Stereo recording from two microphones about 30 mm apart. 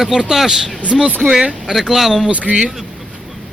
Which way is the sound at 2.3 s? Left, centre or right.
Right.